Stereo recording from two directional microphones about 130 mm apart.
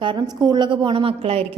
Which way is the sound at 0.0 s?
35° right (ahead or behind).